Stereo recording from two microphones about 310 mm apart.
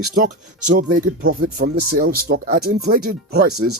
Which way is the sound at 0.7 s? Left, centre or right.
Right.